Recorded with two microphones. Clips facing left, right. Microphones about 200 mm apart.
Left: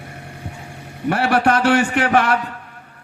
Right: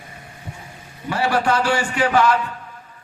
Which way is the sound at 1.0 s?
65° left (ahead or behind).